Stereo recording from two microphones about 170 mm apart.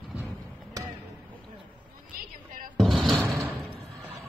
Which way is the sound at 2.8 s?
Centre (ahead or behind).